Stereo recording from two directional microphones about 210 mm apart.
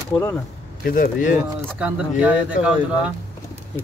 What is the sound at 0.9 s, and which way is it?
Speech, 40° left (ahead or behind).